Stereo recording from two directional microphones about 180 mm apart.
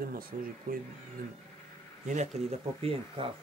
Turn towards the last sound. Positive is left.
turn(degrees=-30)  # may be behind; listen again after turning